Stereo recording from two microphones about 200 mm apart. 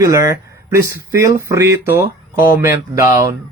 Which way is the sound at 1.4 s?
15° right (ahead or behind).